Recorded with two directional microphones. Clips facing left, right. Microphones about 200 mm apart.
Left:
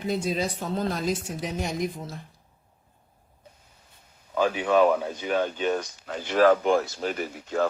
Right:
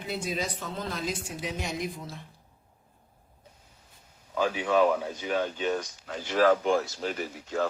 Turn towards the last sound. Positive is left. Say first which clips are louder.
# left 3 dB
turn(degrees=55)  # may be behind; listen again after turning